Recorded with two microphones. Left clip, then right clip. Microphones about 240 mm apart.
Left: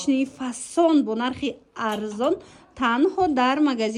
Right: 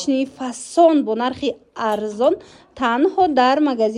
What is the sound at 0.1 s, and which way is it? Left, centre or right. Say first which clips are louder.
A woman's voice: right 3 dB; left.